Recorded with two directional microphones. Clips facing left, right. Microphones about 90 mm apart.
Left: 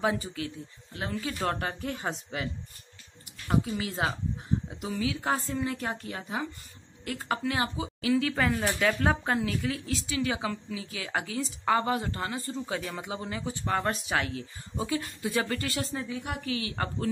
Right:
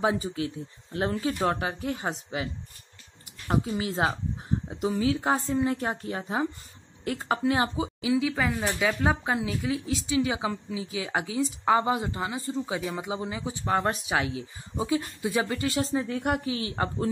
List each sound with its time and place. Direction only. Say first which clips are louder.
0.0 s a woman's voice: right 3 dB; 25° right (ahead or behind)
1.6 s speech: right 2 dB; 5° right (ahead or behind)
3.4 s a woman's voice: right 1 dB; 25° right (ahead or behind)
8.1 s speech: even; 5° right (ahead or behind); by 16.1 s 20° right (ahead or behind)
16.1 s speech: right 7 dB; 65° right (ahead or behind)
16.4 s a woman's voice: right 3 dB; 25° right (ahead or behind)